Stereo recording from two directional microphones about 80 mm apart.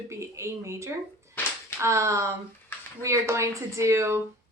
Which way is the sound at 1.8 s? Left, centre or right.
Right.